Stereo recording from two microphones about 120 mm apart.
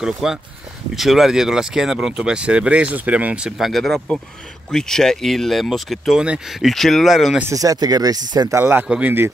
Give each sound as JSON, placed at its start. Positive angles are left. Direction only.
{"t": 0.0, "sound": "speech", "side_deg": -5}
{"t": 7.5, "sound": "speech", "side_deg": -30}
{"t": 8.5, "sound": "speech", "side_deg": -15}
{"t": 8.8, "sound": "speech", "side_deg": -5}